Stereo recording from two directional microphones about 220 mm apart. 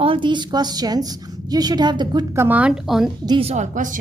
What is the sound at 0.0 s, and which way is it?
A woman's voice, 25° right (ahead or behind).